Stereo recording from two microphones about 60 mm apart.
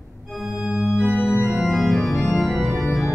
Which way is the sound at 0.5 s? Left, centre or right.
Centre.